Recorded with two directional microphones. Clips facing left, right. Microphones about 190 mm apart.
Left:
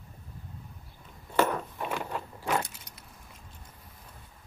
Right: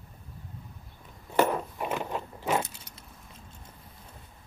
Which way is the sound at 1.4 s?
15° right (ahead or behind).